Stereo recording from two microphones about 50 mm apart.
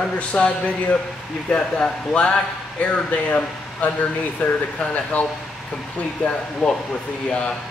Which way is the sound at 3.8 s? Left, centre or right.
Left.